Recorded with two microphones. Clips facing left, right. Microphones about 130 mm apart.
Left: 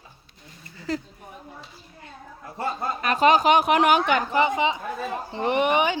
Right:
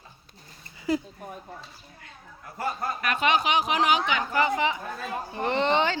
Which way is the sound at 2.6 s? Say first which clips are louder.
Left 2 dB; 25° left (ahead or behind).